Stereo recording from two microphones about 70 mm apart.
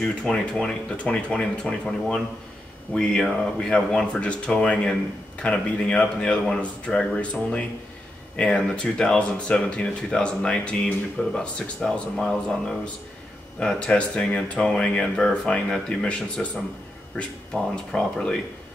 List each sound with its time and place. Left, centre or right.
0.0 s speech: centre
17.9 s speech: centre